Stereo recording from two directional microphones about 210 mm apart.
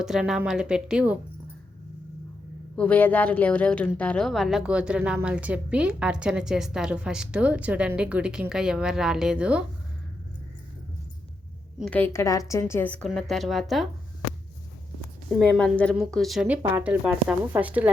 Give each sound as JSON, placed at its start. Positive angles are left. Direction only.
{"t": 0.0, "sound": "a woman's voice", "side_deg": 0}
{"t": 2.7, "sound": "a woman's voice", "side_deg": 5}
{"t": 11.8, "sound": "a woman's voice", "side_deg": 5}
{"t": 15.3, "sound": "a woman's voice", "side_deg": 5}